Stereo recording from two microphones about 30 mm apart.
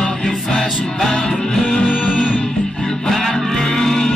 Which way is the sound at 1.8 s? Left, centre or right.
Left.